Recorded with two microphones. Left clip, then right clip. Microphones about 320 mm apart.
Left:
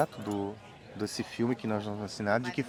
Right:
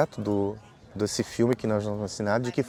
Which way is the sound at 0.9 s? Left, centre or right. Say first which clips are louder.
Right 7 dB; right.